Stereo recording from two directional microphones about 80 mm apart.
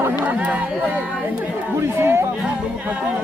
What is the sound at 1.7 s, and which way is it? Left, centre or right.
Speech, right.